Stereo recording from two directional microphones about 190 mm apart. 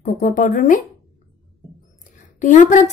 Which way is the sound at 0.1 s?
40° left (ahead or behind).